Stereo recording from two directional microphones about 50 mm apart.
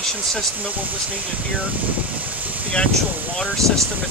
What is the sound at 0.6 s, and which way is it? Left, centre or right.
Speech, right.